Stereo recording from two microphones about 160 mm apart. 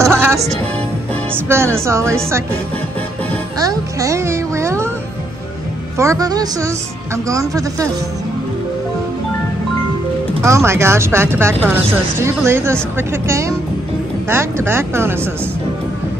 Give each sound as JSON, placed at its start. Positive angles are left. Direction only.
{"t": 0.0, "sound": "music", "side_deg": -15}
{"t": 1.3, "sound": "speech", "side_deg": -15}
{"t": 3.5, "sound": "music", "side_deg": -20}
{"t": 5.9, "sound": "a woman's voice", "side_deg": -20}
{"t": 10.4, "sound": "speech", "side_deg": -15}